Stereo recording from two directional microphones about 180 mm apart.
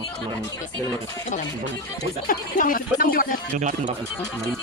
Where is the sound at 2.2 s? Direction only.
50° left (ahead or behind).